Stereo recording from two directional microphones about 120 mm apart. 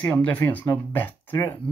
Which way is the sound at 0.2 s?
15° left (ahead or behind).